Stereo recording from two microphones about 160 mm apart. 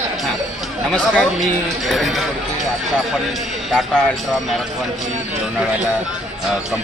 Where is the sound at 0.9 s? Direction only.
Centre (ahead or behind).